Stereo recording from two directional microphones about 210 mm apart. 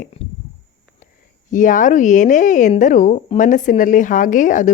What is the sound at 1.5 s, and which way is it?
Speech, 40° left (ahead or behind).